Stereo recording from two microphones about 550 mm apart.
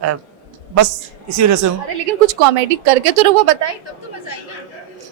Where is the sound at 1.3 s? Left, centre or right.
Right.